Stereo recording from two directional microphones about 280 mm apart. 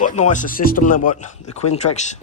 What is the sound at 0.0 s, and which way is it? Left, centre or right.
Speech, left.